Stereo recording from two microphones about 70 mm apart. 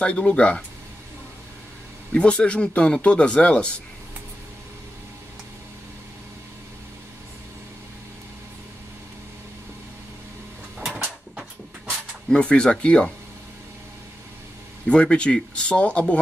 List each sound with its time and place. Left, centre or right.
0.0 s speech: centre
2.1 s speech: centre
12.3 s speech: centre
14.9 s speech: centre